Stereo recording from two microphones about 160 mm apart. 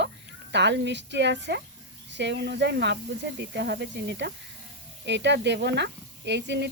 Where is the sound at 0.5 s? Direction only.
90° right.